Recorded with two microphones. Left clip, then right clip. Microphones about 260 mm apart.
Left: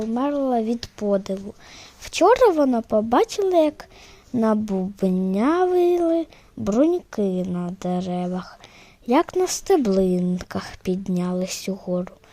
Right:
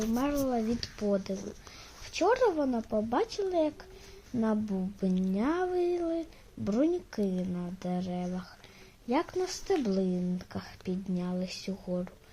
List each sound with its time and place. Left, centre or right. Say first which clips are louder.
0.1 s speech: left 10 dB; left